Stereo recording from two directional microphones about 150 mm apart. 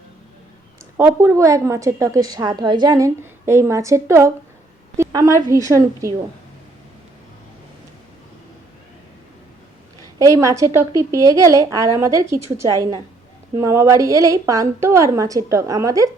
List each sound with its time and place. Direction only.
0.9 s a woman's voice: 15° right (ahead or behind)
10.2 s a woman's voice: 20° right (ahead or behind)